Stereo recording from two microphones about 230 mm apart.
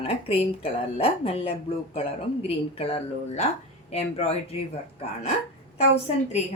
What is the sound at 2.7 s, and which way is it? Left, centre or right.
Speech, left.